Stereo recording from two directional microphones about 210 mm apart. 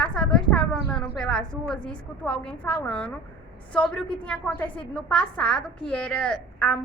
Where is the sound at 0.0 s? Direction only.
5° left (ahead or behind).